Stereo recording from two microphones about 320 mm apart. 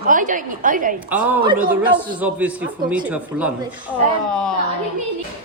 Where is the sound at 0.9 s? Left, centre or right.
Centre.